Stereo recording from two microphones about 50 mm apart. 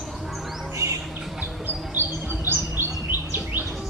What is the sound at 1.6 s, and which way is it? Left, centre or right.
Chirp, right.